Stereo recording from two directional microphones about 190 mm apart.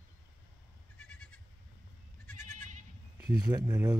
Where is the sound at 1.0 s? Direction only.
5° left (ahead or behind).